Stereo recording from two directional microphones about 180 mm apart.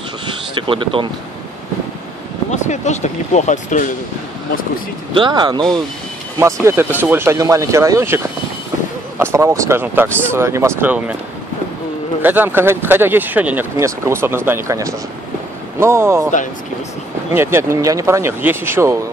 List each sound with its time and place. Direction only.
0.7 s speech: 30° right (ahead or behind)
2.5 s speech: 40° left (ahead or behind)
5.1 s speech: 25° right (ahead or behind)
9.2 s speech: 15° right (ahead or behind)
12.2 s speech: 10° right (ahead or behind)
17.3 s speech: 15° right (ahead or behind)